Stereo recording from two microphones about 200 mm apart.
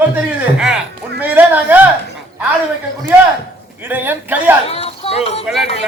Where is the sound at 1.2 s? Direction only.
10° right (ahead or behind).